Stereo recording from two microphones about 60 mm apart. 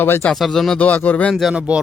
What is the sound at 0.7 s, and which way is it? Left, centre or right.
Speech, left.